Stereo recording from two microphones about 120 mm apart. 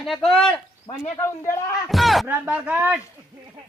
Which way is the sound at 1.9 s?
Centre (ahead or behind).